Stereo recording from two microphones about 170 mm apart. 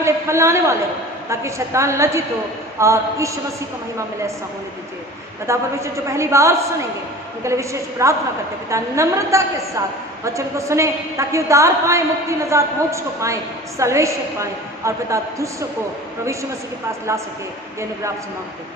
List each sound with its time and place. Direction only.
0.0 s a woman's voice: 15° right (ahead or behind)
5.5 s a woman's voice: 15° right (ahead or behind)